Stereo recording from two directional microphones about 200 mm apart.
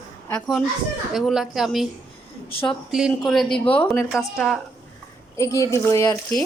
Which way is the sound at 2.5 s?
25° left (ahead or behind).